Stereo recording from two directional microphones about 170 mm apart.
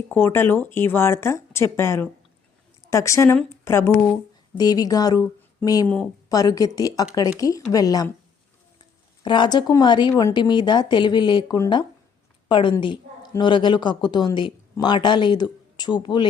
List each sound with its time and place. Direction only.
0.1 s a woman's voice: 15° left (ahead or behind)